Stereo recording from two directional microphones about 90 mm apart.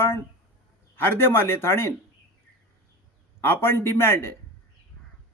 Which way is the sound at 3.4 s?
25° left (ahead or behind).